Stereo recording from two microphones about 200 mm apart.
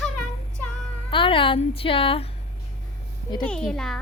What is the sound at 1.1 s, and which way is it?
A woman's voice, 25° left (ahead or behind).